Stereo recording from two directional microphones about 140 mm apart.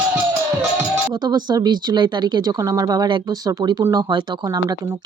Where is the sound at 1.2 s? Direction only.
30° right (ahead or behind).